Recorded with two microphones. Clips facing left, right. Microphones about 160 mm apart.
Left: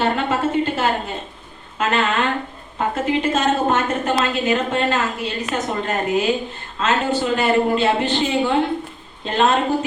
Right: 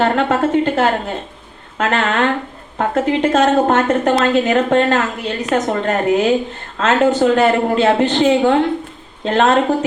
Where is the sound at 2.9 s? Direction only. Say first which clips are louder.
Right 5 dB; 70° right (ahead or behind).